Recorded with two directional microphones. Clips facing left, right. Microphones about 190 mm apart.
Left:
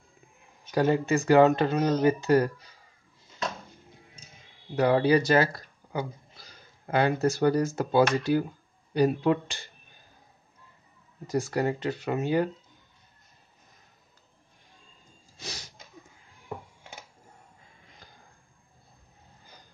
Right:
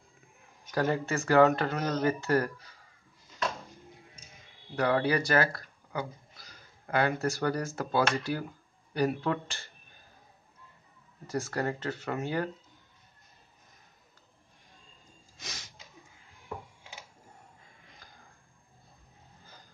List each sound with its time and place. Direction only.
0.7 s speech: 20° left (ahead or behind)
4.7 s speech: 20° left (ahead or behind)
11.2 s speech: 15° left (ahead or behind)
15.3 s a sound: 30° left (ahead or behind)